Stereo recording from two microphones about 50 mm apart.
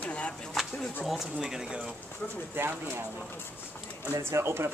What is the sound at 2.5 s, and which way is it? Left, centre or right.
Speech, right.